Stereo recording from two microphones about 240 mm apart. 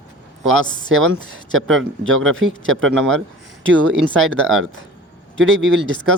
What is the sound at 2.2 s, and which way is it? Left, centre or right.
Speech, right.